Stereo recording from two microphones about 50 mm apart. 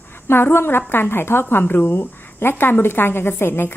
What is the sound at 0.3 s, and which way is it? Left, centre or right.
A woman's voice, left.